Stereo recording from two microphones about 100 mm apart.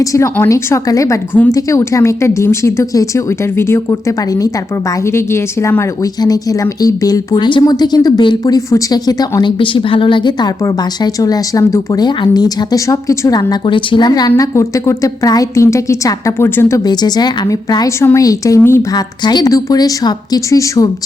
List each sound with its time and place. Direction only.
0.0 s a woman's voice: 30° left (ahead or behind)
9.4 s a woman's voice: 60° left (ahead or behind)
10.6 s a woman's voice: 35° left (ahead or behind)
12.0 s a woman's voice: 45° left (ahead or behind)
14.1 s a woman's voice: 35° left (ahead or behind)
16.8 s a woman's voice: 45° left (ahead or behind); by 18.9 s 25° left (ahead or behind)
18.9 s a woman's voice: 45° left (ahead or behind)